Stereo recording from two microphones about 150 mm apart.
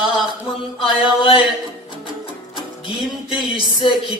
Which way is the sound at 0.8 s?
35° left (ahead or behind).